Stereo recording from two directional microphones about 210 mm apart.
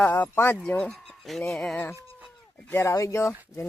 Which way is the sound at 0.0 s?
10° left (ahead or behind).